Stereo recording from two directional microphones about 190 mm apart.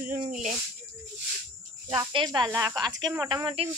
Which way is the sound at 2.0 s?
20° right (ahead or behind).